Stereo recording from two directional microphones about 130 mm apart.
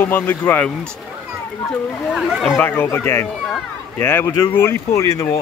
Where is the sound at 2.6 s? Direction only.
15° left (ahead or behind).